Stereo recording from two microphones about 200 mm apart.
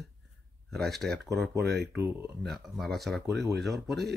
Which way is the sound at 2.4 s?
Centre (ahead or behind).